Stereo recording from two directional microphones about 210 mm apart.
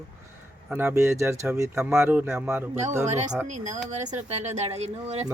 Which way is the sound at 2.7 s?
35° right (ahead or behind).